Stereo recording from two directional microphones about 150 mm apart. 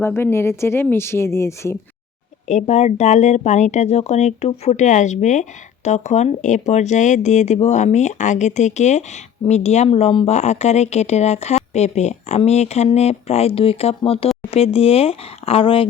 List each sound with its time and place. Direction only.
0.0 s speech: 15° left (ahead or behind)
2.5 s speech: 50° left (ahead or behind)